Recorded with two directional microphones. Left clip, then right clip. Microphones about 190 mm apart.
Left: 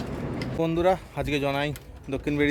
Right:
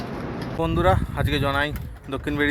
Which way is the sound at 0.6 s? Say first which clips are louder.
Right 2 dB; 10° left (ahead or behind).